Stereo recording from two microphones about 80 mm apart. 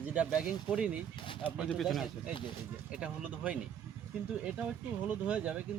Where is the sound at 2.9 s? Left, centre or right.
Centre.